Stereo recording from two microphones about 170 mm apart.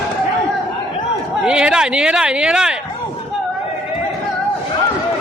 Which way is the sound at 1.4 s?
5° right (ahead or behind).